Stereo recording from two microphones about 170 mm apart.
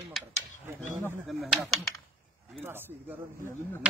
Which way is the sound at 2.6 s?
10° right (ahead or behind).